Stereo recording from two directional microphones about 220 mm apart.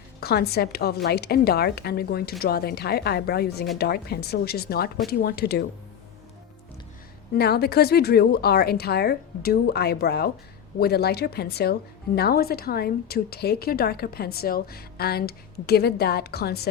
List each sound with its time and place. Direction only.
0.2 s a woman's voice: 45° left (ahead or behind)
7.3 s a woman's voice: 45° left (ahead or behind)